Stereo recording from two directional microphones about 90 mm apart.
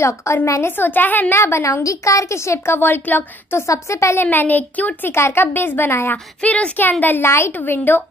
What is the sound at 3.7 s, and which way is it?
Speech, 35° left (ahead or behind).